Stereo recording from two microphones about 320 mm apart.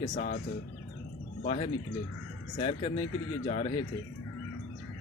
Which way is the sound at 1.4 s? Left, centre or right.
Centre.